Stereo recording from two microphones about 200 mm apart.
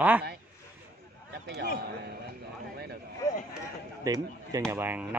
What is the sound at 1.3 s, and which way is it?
Speech, 50° right (ahead or behind).